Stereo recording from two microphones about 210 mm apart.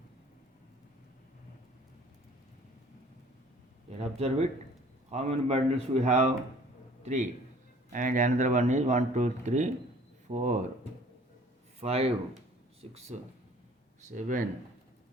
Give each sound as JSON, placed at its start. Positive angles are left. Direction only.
{"t": 3.8, "sound": "a man's voice", "side_deg": -30}
{"t": 11.8, "sound": "speech", "side_deg": -30}
{"t": 14.1, "sound": "speech", "side_deg": -35}